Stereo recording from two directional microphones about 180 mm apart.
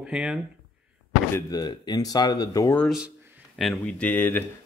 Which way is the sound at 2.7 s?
5° left (ahead or behind).